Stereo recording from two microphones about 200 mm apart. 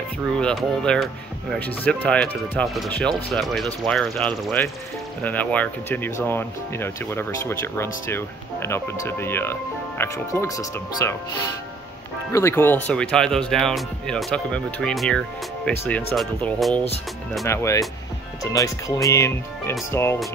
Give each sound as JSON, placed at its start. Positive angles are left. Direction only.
{"t": 0.4, "sound": "speech", "side_deg": 5}
{"t": 12.3, "sound": "speech", "side_deg": 15}
{"t": 17.5, "sound": "speech", "side_deg": 15}